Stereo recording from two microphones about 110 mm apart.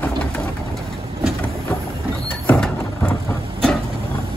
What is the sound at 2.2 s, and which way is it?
Sliding door, 10° left (ahead or behind).